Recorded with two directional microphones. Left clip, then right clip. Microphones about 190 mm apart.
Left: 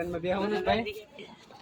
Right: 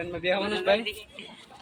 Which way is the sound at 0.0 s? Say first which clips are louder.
Right 3 dB; 55° left (ahead or behind).